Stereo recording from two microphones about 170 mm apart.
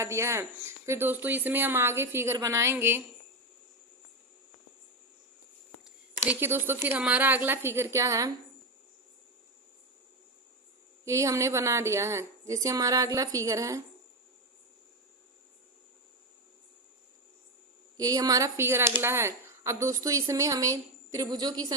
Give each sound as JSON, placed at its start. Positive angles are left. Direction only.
{"t": 0.0, "sound": "speech", "side_deg": -15}
{"t": 6.2, "sound": "speech", "side_deg": -10}
{"t": 11.0, "sound": "speech", "side_deg": -20}
{"t": 17.9, "sound": "speech", "side_deg": -20}